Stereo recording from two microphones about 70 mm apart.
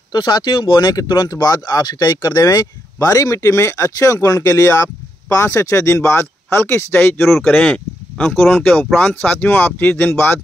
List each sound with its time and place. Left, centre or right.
0.1 s speech: left
3.3 s speech: left
7.2 s speech: centre
8.9 s speech: left